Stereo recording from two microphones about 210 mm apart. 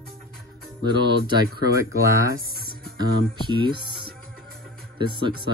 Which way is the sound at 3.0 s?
20° right (ahead or behind).